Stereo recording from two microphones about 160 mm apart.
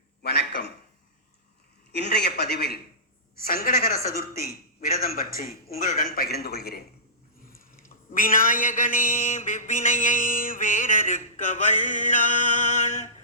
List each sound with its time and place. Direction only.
0.2 s a sound: 80° left
1.9 s a man's voice: 90° left
3.4 s a man's voice: 65° left (ahead or behind)
6.1 s a man's voice: 75° left (ahead or behind)
8.1 s mantra: 60° left (ahead or behind)